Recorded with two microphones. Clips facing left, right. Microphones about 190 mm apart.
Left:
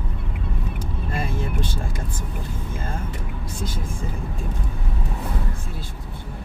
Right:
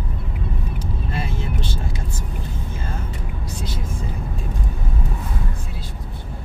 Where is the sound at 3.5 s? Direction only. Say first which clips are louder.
Left 1 dB; 50° left (ahead or behind).